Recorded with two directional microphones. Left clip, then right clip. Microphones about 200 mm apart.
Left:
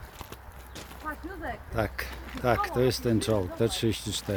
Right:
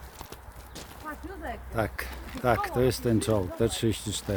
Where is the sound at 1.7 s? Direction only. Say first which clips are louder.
Right 1 dB; centre (ahead or behind).